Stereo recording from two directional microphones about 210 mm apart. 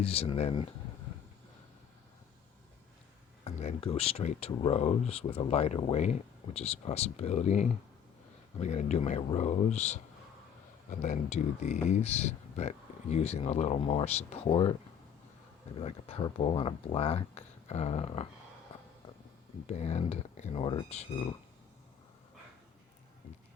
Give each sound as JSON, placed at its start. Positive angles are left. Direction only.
{"t": 0.0, "sound": "speech", "side_deg": 30}
{"t": 3.4, "sound": "speech", "side_deg": 30}
{"t": 15.8, "sound": "speech", "side_deg": 30}
{"t": 19.6, "sound": "speech", "side_deg": 30}